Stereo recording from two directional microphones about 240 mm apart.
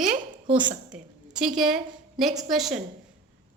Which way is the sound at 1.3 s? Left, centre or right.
Centre.